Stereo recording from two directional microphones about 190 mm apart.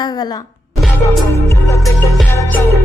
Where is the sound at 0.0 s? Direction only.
20° left (ahead or behind).